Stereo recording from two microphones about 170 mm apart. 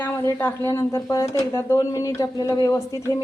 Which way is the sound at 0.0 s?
15° left (ahead or behind).